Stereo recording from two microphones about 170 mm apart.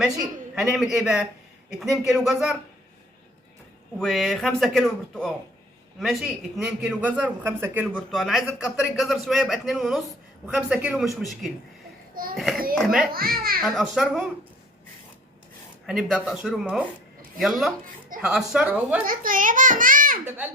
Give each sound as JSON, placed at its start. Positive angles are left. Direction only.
{"t": 0.5, "sound": "speech", "side_deg": 0}
{"t": 3.9, "sound": "speech", "side_deg": 0}
{"t": 6.6, "sound": "a man's voice", "side_deg": -5}
{"t": 7.9, "sound": "speech", "side_deg": 5}
{"t": 12.1, "sound": "a child's voice", "side_deg": -60}
{"t": 12.7, "sound": "speech", "side_deg": 0}
{"t": 13.1, "sound": "a child's voice", "side_deg": -60}
{"t": 13.7, "sound": "speech", "side_deg": 0}
{"t": 15.9, "sound": "speech", "side_deg": 0}
{"t": 19.0, "sound": "a child's voice", "side_deg": -55}
{"t": 20.2, "sound": "a man's voice", "side_deg": -10}